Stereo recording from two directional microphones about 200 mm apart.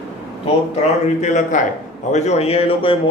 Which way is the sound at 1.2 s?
40° left (ahead or behind).